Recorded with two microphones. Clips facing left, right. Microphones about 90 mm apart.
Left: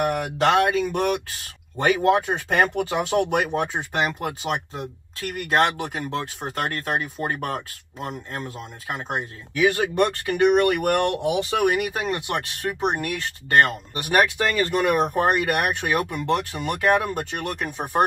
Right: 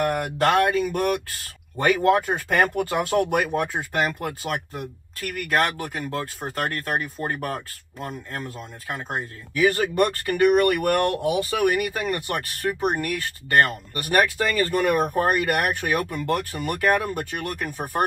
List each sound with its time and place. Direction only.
0.0 s speech: 20° left (ahead or behind)
17.2 s speech: 70° left (ahead or behind)
17.5 s speech: 20° left (ahead or behind)